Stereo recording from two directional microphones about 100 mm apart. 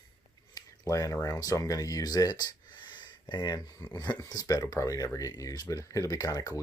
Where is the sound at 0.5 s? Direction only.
35° left (ahead or behind).